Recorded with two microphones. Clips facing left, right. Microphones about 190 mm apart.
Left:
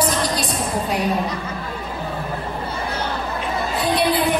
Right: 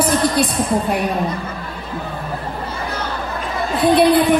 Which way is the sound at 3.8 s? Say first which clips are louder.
Right 8 dB; 55° right (ahead or behind).